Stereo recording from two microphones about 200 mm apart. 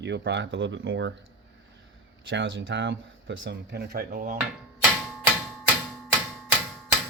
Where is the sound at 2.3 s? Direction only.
65° right (ahead or behind); by 4.3 s 45° right (ahead or behind).